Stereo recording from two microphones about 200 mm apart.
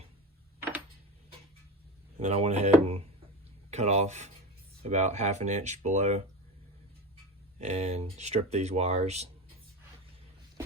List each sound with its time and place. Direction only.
2.2 s speech: 35° right (ahead or behind)
7.6 s speech: 35° right (ahead or behind)